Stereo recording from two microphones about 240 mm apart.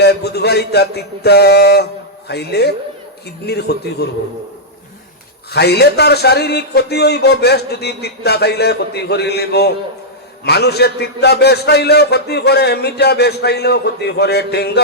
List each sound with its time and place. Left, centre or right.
0.0 s a sound: left
3.4 s a man's voice: left
5.5 s a man's voice: left